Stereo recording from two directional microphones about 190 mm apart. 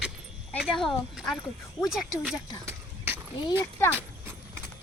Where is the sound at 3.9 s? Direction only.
10° right (ahead or behind).